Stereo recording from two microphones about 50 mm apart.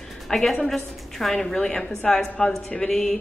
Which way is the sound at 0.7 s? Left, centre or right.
Centre.